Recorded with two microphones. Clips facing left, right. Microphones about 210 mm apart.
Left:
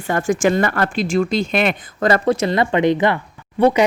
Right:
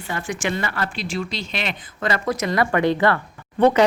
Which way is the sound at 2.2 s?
30° left (ahead or behind).